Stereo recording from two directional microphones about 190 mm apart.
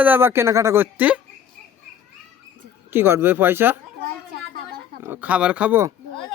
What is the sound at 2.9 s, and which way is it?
Speech, 10° right (ahead or behind).